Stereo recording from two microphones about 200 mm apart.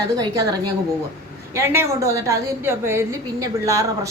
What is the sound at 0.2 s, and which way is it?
A woman's voice, 20° right (ahead or behind).